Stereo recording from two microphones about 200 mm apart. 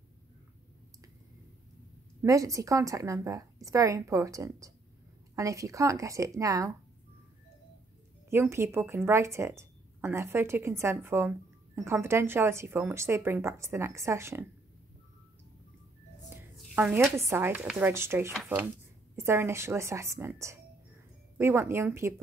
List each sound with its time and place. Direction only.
2.2 s a woman's voice: 15° right (ahead or behind)
8.3 s a woman's voice: 10° right (ahead or behind)
16.3 s a sound: 10° right (ahead or behind)
17.2 s a woman's voice: 10° right (ahead or behind)